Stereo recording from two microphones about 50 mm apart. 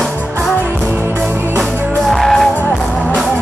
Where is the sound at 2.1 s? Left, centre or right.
Centre.